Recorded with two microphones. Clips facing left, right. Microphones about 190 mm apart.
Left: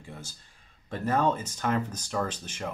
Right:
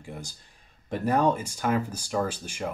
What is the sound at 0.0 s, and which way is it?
Speech, 15° right (ahead or behind).